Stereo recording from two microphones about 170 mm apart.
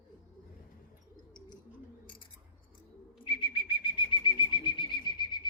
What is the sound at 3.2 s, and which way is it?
Bird flight, 30° left (ahead or behind).